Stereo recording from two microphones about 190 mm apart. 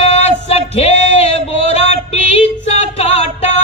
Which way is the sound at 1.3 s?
35° left (ahead or behind).